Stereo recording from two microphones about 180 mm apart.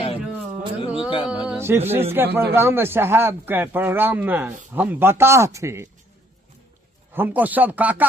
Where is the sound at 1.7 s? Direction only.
10° right (ahead or behind).